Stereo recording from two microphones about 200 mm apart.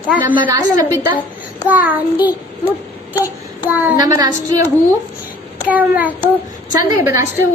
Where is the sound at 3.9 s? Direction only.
20° right (ahead or behind).